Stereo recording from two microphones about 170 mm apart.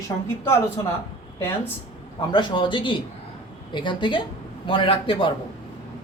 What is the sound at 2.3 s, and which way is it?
A man's voice, 25° left (ahead or behind).